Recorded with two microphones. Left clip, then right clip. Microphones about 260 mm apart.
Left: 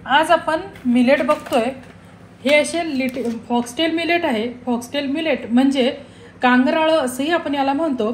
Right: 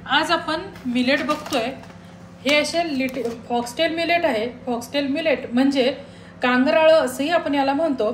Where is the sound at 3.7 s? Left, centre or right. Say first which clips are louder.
Left 1 dB; left.